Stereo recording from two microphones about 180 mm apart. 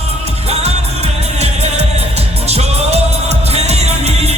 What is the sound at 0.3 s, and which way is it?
Music, 35° right (ahead or behind).